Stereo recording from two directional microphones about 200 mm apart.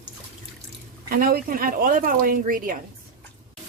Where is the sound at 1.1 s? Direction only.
45° right (ahead or behind).